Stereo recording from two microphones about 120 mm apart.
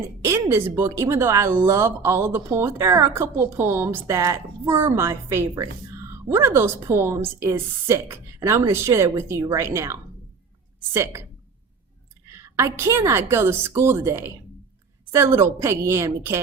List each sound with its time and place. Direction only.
0.2 s a woman's voice: 20° right (ahead or behind)
12.5 s a woman's voice: 25° right (ahead or behind)